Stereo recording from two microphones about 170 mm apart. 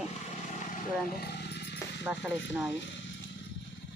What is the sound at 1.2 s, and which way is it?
Wild animals, 75° left (ahead or behind).